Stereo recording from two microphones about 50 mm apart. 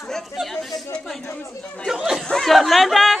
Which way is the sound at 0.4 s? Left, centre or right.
Centre.